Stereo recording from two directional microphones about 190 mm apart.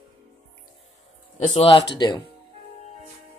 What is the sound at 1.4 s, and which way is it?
Speech, 30° left (ahead or behind).